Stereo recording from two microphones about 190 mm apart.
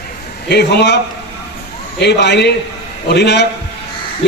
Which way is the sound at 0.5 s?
60° left (ahead or behind).